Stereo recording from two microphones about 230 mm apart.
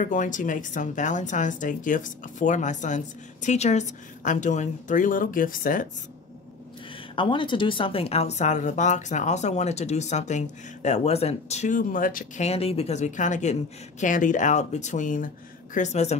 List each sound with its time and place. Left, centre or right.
0.0 s speech: left
7.2 s speech: left